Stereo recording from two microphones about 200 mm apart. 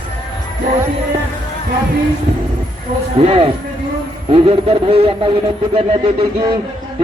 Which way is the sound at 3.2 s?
30° right (ahead or behind).